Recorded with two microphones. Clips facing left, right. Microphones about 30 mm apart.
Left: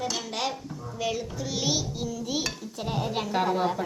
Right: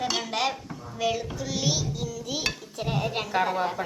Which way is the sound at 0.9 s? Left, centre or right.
Centre.